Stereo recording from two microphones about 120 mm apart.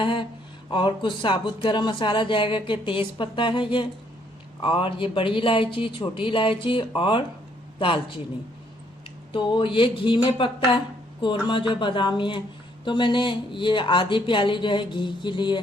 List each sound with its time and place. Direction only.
0.0 s speech: 45° left (ahead or behind)
9.3 s speech: 45° left (ahead or behind)